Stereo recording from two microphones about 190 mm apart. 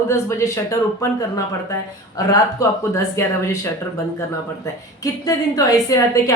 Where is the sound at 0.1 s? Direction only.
15° left (ahead or behind).